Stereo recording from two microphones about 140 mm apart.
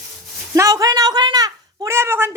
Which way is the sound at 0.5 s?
25° right (ahead or behind).